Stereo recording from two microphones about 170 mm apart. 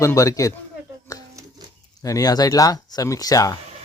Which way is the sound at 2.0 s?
20° left (ahead or behind).